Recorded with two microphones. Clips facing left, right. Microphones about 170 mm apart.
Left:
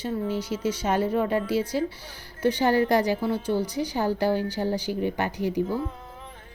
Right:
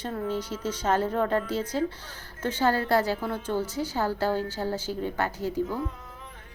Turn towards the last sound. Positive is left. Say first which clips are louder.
# left 2 dB
turn(degrees=15)  # may be behind; listen again after turning